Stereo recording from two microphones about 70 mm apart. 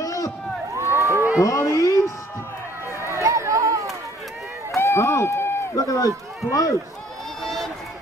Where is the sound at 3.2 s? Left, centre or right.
Right.